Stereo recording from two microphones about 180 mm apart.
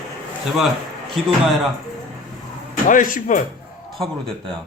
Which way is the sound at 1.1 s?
Centre (ahead or behind).